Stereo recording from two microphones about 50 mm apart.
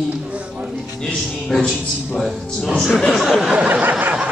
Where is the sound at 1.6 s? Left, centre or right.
Centre.